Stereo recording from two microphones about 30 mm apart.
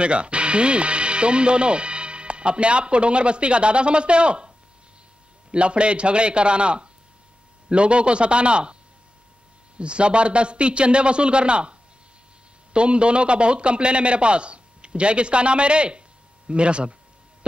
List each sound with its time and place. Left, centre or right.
0.0 s speech: right
5.5 s a man's voice: right
9.8 s a man's voice: right
12.7 s a man's voice: right